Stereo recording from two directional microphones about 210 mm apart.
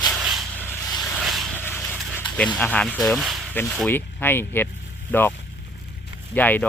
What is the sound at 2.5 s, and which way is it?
Speech, 5° left (ahead or behind).